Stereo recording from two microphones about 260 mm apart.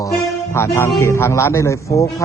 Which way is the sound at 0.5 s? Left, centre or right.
Centre.